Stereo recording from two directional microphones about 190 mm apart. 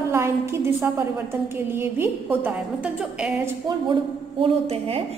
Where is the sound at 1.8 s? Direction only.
10° right (ahead or behind).